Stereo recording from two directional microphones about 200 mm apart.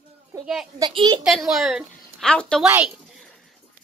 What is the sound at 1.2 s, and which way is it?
A woman's voice, centre (ahead or behind).